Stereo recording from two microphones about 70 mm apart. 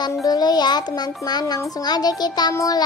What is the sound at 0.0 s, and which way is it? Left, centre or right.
Child singing, left.